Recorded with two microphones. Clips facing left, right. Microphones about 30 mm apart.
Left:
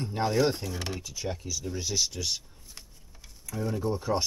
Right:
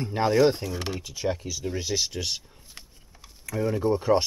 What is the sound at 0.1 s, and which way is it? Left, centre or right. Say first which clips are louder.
Speech: right 5 dB; right.